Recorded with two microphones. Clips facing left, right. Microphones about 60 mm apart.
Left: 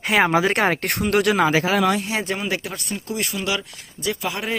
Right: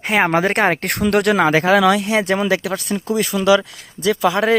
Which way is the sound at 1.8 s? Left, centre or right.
Right.